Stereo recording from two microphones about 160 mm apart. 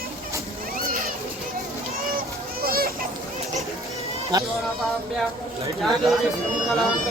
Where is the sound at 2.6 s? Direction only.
70° right (ahead or behind).